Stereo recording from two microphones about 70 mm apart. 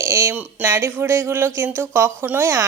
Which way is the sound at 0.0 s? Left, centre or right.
Right.